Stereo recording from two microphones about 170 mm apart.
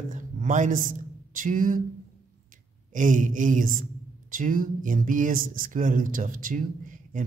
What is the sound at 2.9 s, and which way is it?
Speech, 50° right (ahead or behind).